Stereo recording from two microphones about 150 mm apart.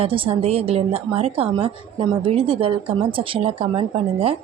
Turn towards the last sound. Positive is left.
turn(degrees=-40)  # may be behind; listen again after turning